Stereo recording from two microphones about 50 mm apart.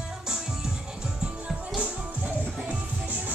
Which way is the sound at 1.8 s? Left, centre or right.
Right.